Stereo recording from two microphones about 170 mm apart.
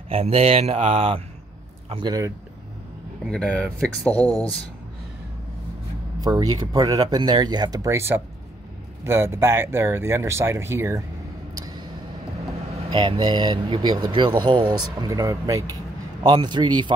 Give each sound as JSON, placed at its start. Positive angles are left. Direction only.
{"t": 0.1, "sound": "speech", "side_deg": -35}
{"t": 3.3, "sound": "speech", "side_deg": 5}
{"t": 4.2, "sound": "speech", "side_deg": -20}
{"t": 6.2, "sound": "speech", "side_deg": -20}
{"t": 12.9, "sound": "speech", "side_deg": -30}